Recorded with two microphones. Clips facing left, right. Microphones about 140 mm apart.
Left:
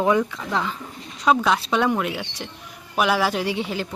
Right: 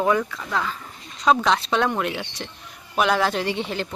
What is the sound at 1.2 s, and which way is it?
Speech, 5° left (ahead or behind).